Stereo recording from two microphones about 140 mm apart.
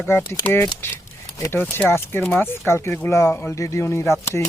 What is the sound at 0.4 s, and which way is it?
Speech, 15° left (ahead or behind).